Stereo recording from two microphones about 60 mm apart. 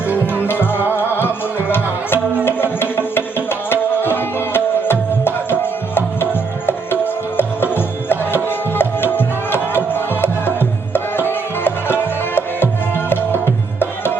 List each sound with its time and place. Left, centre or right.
0.4 s music: left